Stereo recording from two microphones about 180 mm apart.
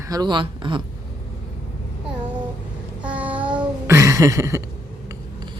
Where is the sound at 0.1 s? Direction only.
25° right (ahead or behind).